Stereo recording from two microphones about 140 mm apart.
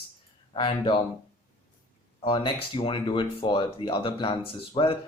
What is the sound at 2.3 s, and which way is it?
Speech, 35° left (ahead or behind).